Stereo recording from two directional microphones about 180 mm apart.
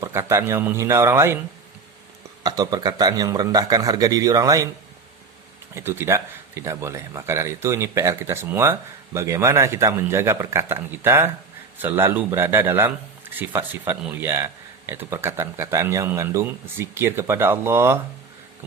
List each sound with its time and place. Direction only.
0.0 s a man's voice: 15° right (ahead or behind)
2.4 s a man's voice: 20° right (ahead or behind)
5.7 s a man's voice: 15° right (ahead or behind)